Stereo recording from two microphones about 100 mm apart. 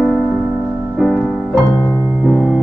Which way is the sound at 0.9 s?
5° left (ahead or behind).